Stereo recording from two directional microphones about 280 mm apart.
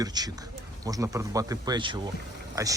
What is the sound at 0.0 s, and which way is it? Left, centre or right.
Speech, centre.